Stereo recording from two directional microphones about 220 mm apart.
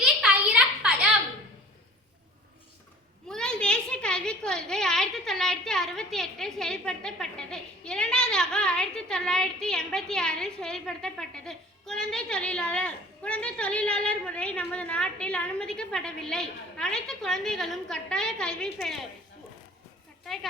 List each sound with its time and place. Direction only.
0.0 s a sound: 5° right (ahead or behind)
3.2 s a woman's voice: 5° left (ahead or behind)
20.2 s speech: centre (ahead or behind)